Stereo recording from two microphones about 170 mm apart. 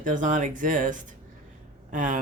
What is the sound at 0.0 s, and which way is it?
Speech, 50° right (ahead or behind).